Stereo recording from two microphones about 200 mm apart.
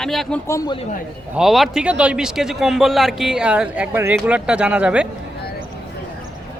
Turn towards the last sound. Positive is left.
turn(degrees=-5)  # may be behind; listen again after turning